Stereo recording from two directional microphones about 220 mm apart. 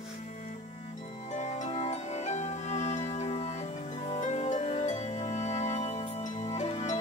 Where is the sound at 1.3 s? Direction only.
30° left (ahead or behind).